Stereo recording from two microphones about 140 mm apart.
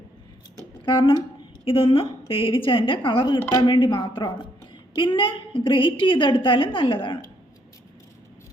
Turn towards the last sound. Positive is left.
turn(degrees=35)  # may be behind; listen again after turning